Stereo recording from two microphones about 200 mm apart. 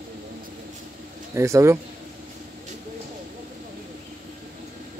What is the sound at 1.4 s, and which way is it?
Speech, 15° right (ahead or behind).